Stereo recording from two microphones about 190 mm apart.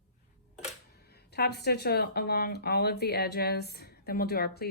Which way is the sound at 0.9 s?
55° left (ahead or behind).